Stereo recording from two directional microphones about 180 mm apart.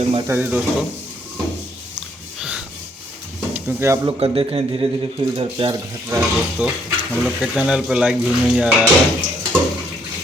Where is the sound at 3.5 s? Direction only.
10° right (ahead or behind).